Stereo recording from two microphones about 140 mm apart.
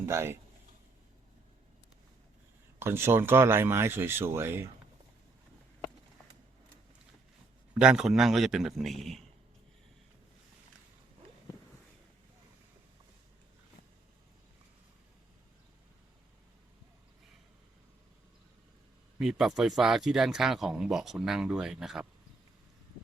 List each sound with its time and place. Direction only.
0.0 s speech: 20° right (ahead or behind)
2.7 s speech: 15° right (ahead or behind)
7.8 s speech: 5° right (ahead or behind)
19.2 s speech: 5° right (ahead or behind)